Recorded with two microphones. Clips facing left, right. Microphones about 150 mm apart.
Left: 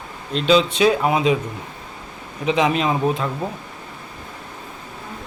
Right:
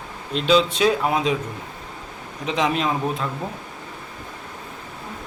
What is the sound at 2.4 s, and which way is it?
Speech, 5° left (ahead or behind).